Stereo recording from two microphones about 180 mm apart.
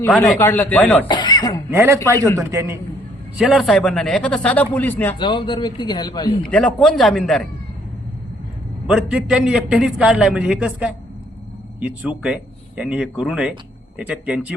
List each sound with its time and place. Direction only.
0.0 s speech: 15° left (ahead or behind)
1.0 s speech: 25° left (ahead or behind)
1.7 s speech: 15° right (ahead or behind)
2.1 s speech: 15° left (ahead or behind)
2.5 s speech: 15° right (ahead or behind)
3.3 s a man's voice: centre (ahead or behind)
5.1 s a man's voice: 25° left (ahead or behind)
6.4 s a man's voice: 5° left (ahead or behind)
8.9 s a man's voice: 5° right (ahead or behind)